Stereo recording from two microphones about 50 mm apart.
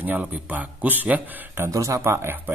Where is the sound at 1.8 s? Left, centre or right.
Right.